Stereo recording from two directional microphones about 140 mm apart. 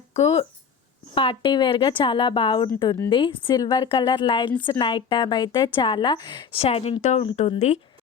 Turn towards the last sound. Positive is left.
turn(degrees=50)  # may be behind; listen again after turning